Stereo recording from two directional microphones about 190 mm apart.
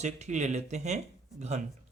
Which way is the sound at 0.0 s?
35° right (ahead or behind).